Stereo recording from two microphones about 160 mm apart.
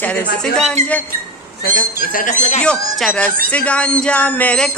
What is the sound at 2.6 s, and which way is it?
Speech, 5° left (ahead or behind).